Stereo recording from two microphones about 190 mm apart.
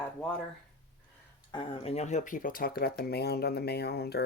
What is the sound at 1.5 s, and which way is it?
Speech, 30° left (ahead or behind).